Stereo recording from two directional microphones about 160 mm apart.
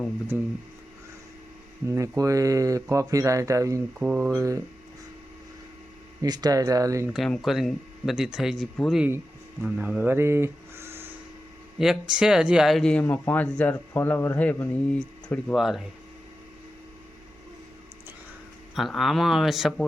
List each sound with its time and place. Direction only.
0.3 s speech: 10° right (ahead or behind)
1.9 s speech: 20° right (ahead or behind)
3.9 s speech: 5° right (ahead or behind)
4.3 s speech: 20° right (ahead or behind)
6.2 s speech: 25° right (ahead or behind)
7.1 s speech: centre (ahead or behind)
9.0 s a sound: 15° right (ahead or behind)
9.6 s speech: 5° right (ahead or behind)
11.8 s speech: 5° right (ahead or behind)
18.7 s speech: centre (ahead or behind)